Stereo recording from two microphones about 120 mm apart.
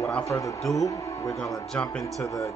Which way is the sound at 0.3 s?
25° left (ahead or behind).